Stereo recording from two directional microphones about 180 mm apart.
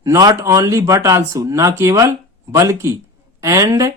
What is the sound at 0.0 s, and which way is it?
Speech, 20° right (ahead or behind).